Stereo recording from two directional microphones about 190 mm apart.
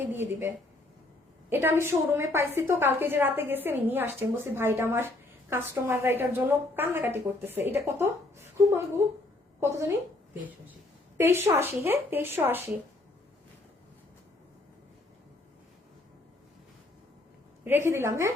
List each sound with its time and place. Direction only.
0.1 s a woman's voice: 10° right (ahead or behind)
11.2 s a woman's voice: 15° right (ahead or behind)
17.6 s a woman's voice: 10° right (ahead or behind)